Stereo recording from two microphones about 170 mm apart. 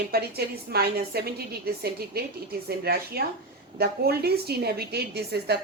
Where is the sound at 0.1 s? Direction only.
65° right (ahead or behind).